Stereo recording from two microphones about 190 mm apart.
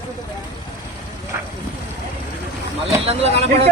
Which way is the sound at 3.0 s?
30° right (ahead or behind).